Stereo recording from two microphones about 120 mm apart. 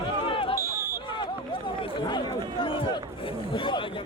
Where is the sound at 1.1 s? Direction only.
40° left (ahead or behind).